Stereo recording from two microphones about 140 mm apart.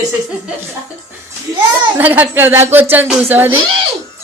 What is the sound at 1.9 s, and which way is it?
Speech, 15° right (ahead or behind).